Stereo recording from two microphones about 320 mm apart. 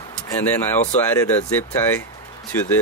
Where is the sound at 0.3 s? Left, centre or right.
Centre.